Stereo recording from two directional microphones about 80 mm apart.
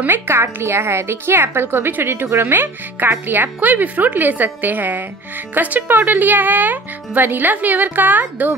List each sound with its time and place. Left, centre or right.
0.0 s a woman's voice: right